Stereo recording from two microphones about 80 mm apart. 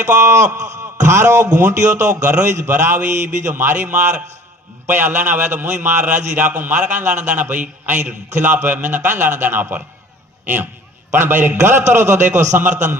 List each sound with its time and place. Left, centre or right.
0.0 s a man's voice: right; by 2.5 s centre
2.7 s a man's voice: right
11.1 s a man's voice: right